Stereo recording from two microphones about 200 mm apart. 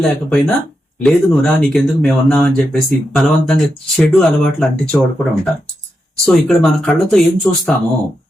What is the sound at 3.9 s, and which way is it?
Speech, 5° left (ahead or behind).